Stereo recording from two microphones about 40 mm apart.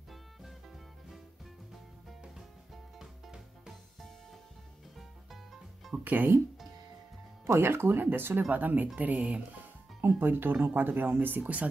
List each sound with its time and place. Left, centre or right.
3.0 s music: centre
4.9 s music: centre
6.0 s speech: right
7.5 s speech: right
8.5 s speech: right
10.0 s speech: right